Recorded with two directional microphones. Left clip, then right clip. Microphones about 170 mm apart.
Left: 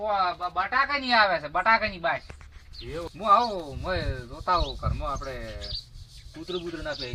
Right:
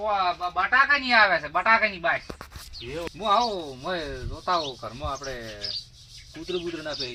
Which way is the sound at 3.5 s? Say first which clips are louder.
Right 1 dB; 20° left (ahead or behind).